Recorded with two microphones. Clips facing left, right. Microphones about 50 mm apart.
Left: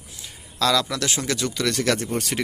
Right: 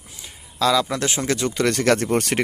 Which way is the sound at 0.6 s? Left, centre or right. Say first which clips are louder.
Right 2 dB; centre.